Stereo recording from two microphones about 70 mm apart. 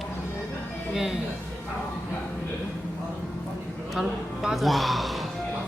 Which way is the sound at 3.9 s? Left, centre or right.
Centre.